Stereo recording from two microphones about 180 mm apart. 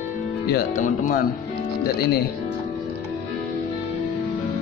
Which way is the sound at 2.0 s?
60° left (ahead or behind).